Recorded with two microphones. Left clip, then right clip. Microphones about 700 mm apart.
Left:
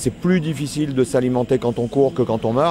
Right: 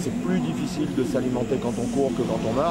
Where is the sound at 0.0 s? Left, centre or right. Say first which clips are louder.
Left 6 dB; left.